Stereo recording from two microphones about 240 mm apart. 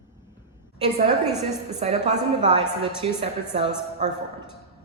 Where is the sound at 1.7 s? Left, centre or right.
Right.